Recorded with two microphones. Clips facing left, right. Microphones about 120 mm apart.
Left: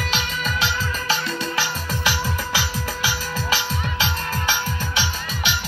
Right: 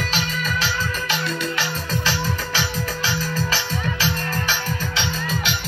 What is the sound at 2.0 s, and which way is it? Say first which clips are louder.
Music: left 3 dB; 15° left (ahead or behind).